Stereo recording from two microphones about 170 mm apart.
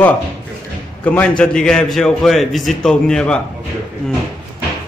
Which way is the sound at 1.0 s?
10° left (ahead or behind).